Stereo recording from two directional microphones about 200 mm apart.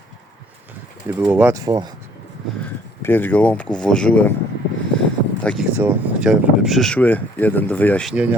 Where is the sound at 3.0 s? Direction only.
10° left (ahead or behind).